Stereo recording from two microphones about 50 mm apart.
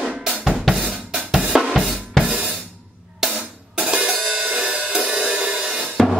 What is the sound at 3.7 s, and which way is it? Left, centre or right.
Music, centre.